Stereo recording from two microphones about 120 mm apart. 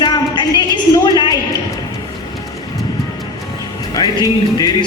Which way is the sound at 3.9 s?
35° left (ahead or behind).